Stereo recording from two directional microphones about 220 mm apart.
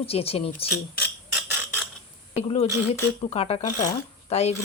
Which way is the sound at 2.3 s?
30° left (ahead or behind).